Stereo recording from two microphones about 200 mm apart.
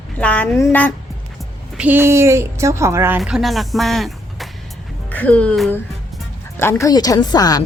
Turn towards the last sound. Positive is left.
turn(degrees=20)  # may be behind; listen again after turning